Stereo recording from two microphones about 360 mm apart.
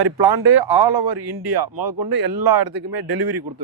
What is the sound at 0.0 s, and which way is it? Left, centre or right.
Speech, right.